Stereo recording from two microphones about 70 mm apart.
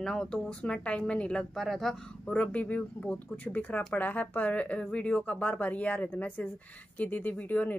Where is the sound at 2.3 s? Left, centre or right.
Centre.